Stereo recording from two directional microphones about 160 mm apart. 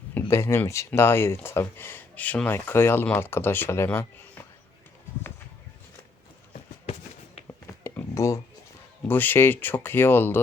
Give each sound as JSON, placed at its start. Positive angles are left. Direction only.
{"t": 0.1, "sound": "speech", "side_deg": 15}
{"t": 7.4, "sound": "a sound", "side_deg": 15}
{"t": 9.0, "sound": "speech", "side_deg": 10}